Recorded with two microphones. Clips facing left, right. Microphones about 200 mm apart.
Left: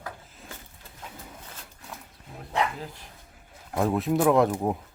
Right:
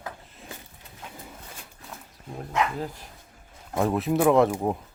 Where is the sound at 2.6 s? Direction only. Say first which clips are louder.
Right 1 dB; 35° left (ahead or behind).